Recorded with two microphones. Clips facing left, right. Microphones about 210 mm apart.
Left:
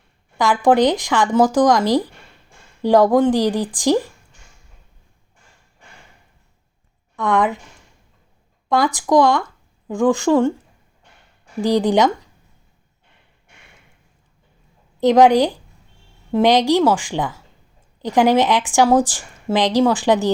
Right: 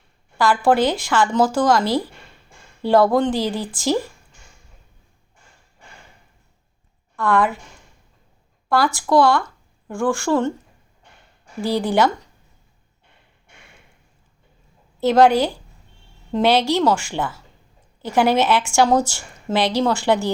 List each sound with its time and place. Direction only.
0.3 s speech: 20° left (ahead or behind)
7.2 s speech: 20° left (ahead or behind)
8.7 s speech: 15° left (ahead or behind)
11.6 s speech: 15° left (ahead or behind)
15.0 s speech: 15° left (ahead or behind)